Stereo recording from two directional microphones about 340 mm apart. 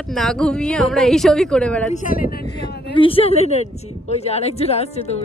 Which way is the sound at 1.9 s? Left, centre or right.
Left.